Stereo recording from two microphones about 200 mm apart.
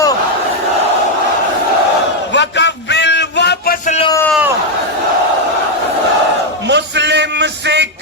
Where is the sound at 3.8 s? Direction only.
35° left (ahead or behind).